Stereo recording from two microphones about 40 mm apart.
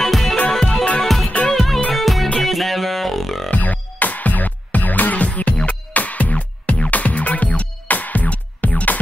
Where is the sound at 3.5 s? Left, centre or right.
Left.